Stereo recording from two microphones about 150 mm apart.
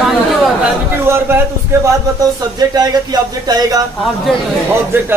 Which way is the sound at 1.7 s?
20° right (ahead or behind).